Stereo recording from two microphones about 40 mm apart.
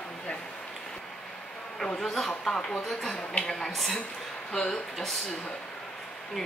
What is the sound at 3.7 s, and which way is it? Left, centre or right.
Speech, centre.